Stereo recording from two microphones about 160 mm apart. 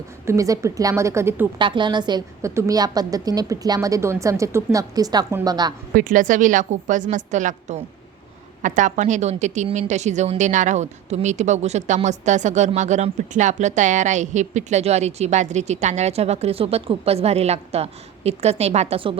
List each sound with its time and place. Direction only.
0.3 s a woman's voice: 20° right (ahead or behind)
1.5 s a woman's voice: 30° right (ahead or behind)
5.9 s a woman's voice: 60° right (ahead or behind); by 19.1 s 35° right (ahead or behind)